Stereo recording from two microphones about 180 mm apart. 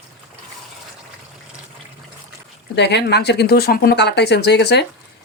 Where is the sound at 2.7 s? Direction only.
70° left (ahead or behind).